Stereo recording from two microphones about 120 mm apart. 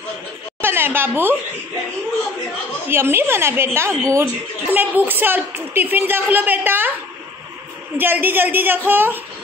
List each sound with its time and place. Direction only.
0.6 s a sound: 20° right (ahead or behind)
2.9 s a woman's voice: 20° right (ahead or behind)
8.0 s a woman's voice: 15° right (ahead or behind)